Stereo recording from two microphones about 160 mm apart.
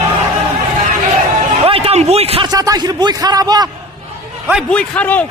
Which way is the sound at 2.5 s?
25° right (ahead or behind).